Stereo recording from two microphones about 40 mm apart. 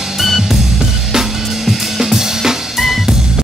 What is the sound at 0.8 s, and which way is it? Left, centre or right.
Drum kit, centre.